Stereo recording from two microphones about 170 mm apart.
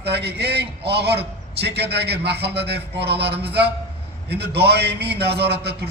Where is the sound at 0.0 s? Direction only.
75° right (ahead or behind).